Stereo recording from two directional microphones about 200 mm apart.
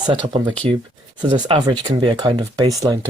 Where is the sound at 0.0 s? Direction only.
20° right (ahead or behind).